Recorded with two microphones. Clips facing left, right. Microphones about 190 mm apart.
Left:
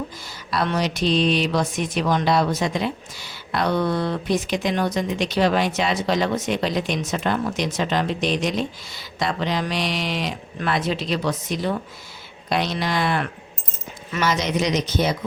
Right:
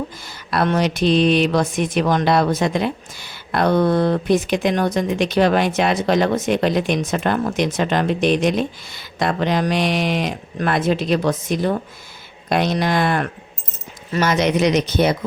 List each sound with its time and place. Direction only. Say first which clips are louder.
0.3 s speech: right 5 dB; 55° right (ahead or behind)
14.3 s speech: right 5 dB; 60° right (ahead or behind)